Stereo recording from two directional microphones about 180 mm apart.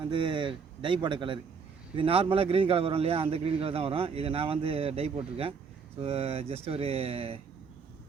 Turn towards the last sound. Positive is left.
turn(degrees=-35)  # may be behind; listen again after turning